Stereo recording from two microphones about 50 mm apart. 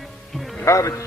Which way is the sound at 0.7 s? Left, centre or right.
Left.